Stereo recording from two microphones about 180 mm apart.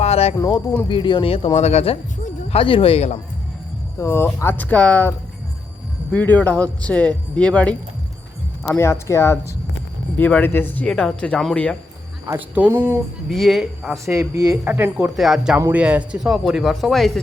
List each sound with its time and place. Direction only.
0.0 s speech: 35° left (ahead or behind)
0.3 s speech: 25° left (ahead or behind)
4.0 s speech: 15° left (ahead or behind)
12.2 s speech: 10° right (ahead or behind)
14.0 s speech: 15° right (ahead or behind); by 17.2 s centre (ahead or behind)